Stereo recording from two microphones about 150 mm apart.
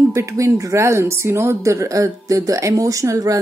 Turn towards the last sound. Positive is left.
turn(degrees=-20)  # may be behind; listen again after turning